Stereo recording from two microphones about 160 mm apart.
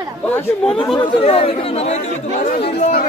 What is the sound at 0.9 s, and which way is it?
Speech, 35° left (ahead or behind).